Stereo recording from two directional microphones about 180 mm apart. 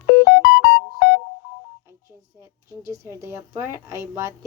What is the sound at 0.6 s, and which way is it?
Music, 75° left (ahead or behind).